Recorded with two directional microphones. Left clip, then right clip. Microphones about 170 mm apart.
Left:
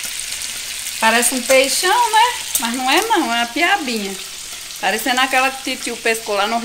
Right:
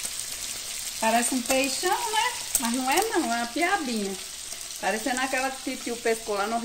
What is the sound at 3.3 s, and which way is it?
Frying, 10° right (ahead or behind).